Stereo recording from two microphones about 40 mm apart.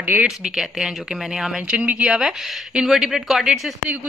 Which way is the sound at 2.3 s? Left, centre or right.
Centre.